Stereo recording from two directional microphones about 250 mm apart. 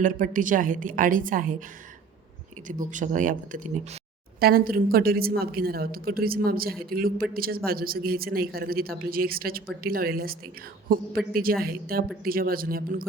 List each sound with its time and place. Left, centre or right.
0.0 s a man's voice: right
2.6 s a man's voice: right